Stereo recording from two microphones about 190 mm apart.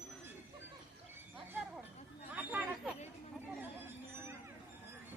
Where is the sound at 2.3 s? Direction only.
5° right (ahead or behind).